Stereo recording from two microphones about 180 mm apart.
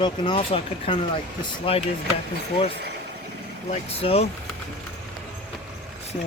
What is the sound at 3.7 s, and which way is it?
Speech, 35° left (ahead or behind).